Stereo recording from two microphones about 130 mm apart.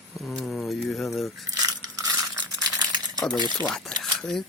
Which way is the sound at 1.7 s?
30° right (ahead or behind).